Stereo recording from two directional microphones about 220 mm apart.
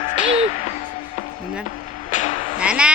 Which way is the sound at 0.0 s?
30° left (ahead or behind).